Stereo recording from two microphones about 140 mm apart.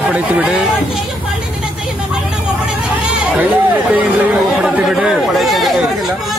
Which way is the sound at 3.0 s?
10° right (ahead or behind).